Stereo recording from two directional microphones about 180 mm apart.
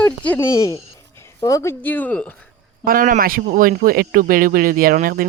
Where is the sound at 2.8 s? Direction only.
50° right (ahead or behind).